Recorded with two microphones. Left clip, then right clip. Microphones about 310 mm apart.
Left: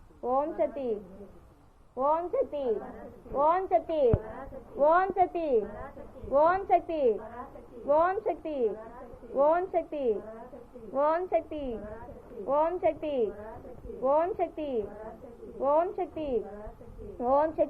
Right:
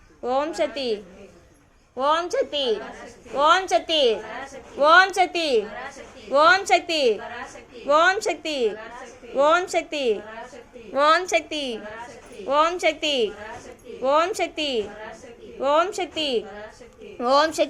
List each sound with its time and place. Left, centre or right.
0.2 s a woman's voice: right
2.0 s a woman's voice: right